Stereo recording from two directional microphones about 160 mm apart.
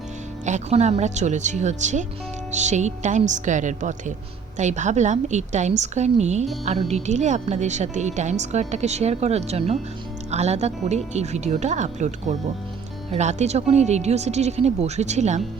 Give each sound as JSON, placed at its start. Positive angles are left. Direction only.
{"t": 0.4, "sound": "a woman's voice", "side_deg": -45}